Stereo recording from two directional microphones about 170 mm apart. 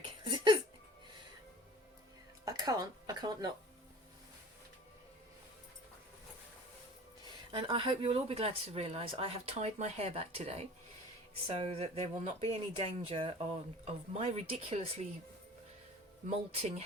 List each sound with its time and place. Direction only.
0.0 s a sound: 30° right (ahead or behind)
2.4 s music: 20° right (ahead or behind)
7.5 s speech: 30° right (ahead or behind)
16.3 s speech: 40° right (ahead or behind)